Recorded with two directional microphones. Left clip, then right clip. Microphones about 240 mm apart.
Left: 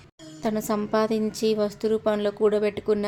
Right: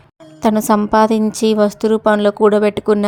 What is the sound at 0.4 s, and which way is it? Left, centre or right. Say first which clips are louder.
A woman's voice: right 12 dB; right.